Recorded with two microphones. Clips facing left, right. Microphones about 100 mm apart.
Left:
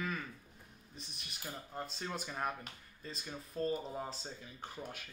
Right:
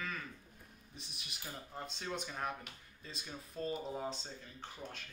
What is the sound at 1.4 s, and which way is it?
A man's voice, centre (ahead or behind).